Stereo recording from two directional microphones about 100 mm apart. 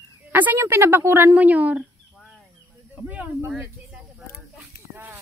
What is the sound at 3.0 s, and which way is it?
Speech, 15° right (ahead or behind).